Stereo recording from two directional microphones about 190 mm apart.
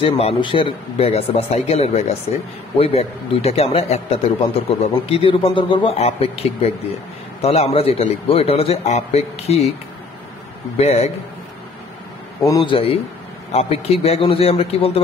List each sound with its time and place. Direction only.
0.0 s speech: 30° left (ahead or behind)
10.8 s speech: 35° left (ahead or behind)
12.4 s a man's voice: 25° left (ahead or behind)